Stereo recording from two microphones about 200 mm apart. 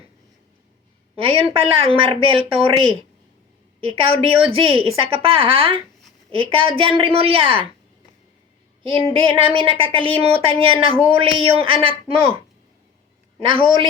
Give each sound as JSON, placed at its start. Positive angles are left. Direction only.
{"t": 1.1, "sound": "a woman's voice", "side_deg": -30}
{"t": 8.8, "sound": "a woman's voice", "side_deg": -25}
{"t": 13.4, "sound": "a woman's voice", "side_deg": -25}